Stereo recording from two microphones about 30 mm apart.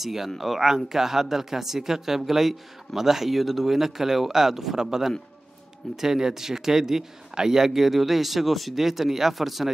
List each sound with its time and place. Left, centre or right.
0.0 s speech: centre